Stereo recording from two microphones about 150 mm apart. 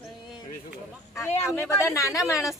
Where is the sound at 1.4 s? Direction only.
15° left (ahead or behind).